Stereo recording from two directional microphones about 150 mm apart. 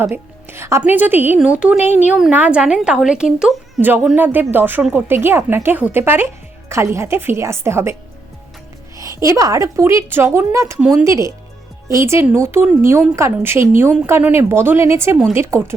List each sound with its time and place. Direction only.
0.0 s speech: 15° right (ahead or behind)
9.0 s a woman's voice: 20° right (ahead or behind)